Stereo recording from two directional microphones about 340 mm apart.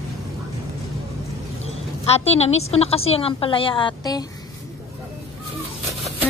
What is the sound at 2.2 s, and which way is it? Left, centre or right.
A woman's voice, centre.